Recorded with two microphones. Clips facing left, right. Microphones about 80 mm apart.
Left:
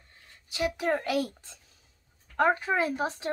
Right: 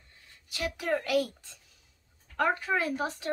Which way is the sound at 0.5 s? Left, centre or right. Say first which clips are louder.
Left 3 dB; left.